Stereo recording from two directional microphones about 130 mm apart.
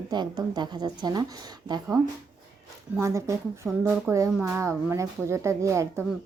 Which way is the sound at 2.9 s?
20° right (ahead or behind).